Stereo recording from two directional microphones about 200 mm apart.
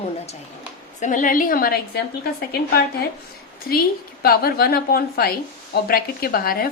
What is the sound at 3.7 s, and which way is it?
A woman's voice, 50° left (ahead or behind).